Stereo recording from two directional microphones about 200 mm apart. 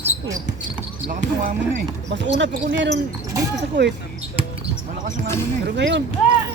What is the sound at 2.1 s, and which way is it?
Speech, 60° right (ahead or behind).